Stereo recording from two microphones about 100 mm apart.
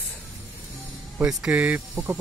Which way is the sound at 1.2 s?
10° right (ahead or behind).